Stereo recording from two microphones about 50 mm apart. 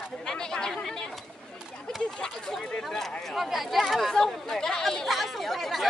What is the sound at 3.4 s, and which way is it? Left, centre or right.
Speech, centre.